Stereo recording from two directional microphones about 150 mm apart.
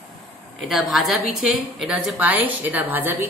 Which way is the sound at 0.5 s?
Centre (ahead or behind).